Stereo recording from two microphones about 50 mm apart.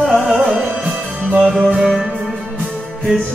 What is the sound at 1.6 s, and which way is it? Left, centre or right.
Music, centre.